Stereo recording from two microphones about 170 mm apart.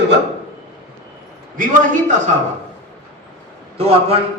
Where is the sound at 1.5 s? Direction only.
50° right (ahead or behind).